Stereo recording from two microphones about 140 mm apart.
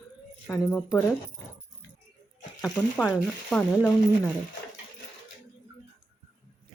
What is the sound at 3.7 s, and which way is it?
Speech, 20° left (ahead or behind).